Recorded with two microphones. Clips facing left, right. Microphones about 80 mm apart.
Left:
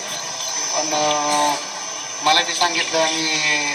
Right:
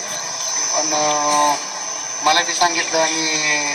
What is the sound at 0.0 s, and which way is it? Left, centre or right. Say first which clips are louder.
Speech: right 1 dB; centre.